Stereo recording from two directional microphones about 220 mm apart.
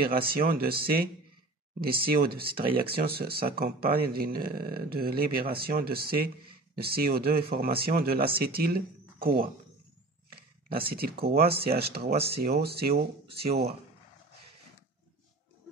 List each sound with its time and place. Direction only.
0.3 s speech: 40° right (ahead or behind)